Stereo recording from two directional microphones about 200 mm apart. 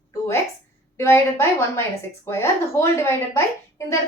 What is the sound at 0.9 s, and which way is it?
A woman's voice, 15° left (ahead or behind).